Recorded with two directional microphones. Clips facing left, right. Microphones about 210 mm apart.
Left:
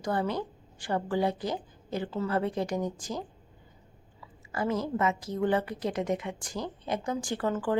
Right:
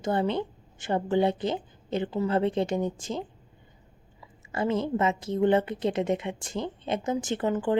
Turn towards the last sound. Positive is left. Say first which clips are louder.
# right 3 dB
turn(degrees=-20)  # may be behind; listen again after turning